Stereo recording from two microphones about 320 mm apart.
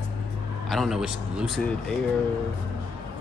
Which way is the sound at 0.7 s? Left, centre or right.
Centre.